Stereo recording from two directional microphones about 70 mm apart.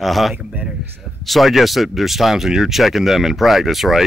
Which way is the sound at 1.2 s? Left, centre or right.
Centre.